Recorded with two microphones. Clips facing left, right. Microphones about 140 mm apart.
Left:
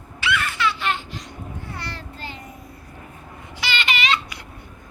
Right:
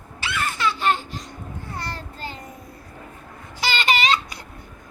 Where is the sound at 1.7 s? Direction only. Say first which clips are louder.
Right 2 dB; 45° right (ahead or behind).